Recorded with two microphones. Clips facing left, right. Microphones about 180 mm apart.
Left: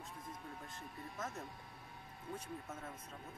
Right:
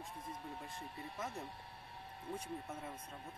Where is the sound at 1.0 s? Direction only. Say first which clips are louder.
Even; 30° right (ahead or behind).